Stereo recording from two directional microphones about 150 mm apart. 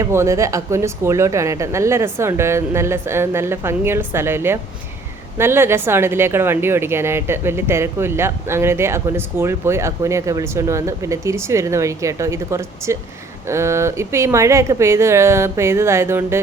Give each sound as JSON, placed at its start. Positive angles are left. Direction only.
{"t": 0.0, "sound": "a woman's voice", "side_deg": -20}